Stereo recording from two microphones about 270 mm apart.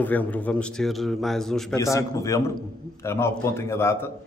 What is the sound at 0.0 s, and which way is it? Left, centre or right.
A man's voice, centre.